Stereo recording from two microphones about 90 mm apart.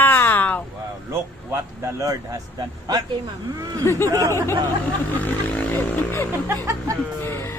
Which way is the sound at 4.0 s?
40° right (ahead or behind).